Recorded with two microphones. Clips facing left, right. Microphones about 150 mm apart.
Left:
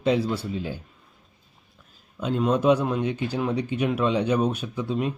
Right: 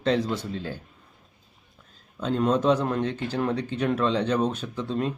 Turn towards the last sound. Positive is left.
turn(degrees=10)  # may be behind; listen again after turning